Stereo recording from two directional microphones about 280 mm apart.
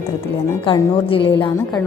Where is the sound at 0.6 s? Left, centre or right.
Centre.